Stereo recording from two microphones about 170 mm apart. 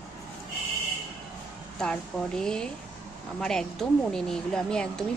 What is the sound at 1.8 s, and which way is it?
A woman's voice, 5° left (ahead or behind).